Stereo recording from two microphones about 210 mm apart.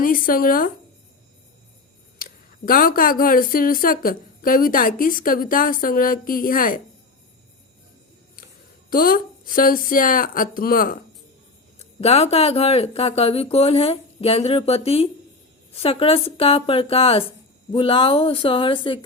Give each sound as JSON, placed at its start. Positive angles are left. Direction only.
{"t": 0.0, "sound": "speech", "side_deg": 40}
{"t": 2.1, "sound": "speech", "side_deg": 45}
{"t": 8.9, "sound": "speech", "side_deg": 45}
{"t": 11.8, "sound": "speech", "side_deg": 30}